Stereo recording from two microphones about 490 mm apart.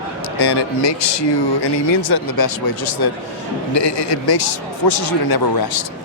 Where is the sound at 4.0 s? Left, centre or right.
Left.